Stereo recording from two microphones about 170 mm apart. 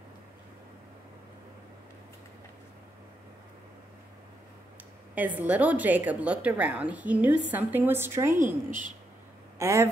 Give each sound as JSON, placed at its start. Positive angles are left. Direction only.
{"t": 5.1, "sound": "a woman's voice", "side_deg": -10}
{"t": 8.6, "sound": "a woman's voice", "side_deg": -50}
{"t": 9.6, "sound": "speech", "side_deg": -20}